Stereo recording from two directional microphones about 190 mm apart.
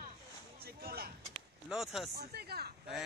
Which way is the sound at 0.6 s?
55° right (ahead or behind).